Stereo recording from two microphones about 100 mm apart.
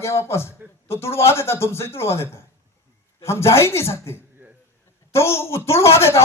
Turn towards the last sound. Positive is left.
turn(degrees=25)  # may be behind; listen again after turning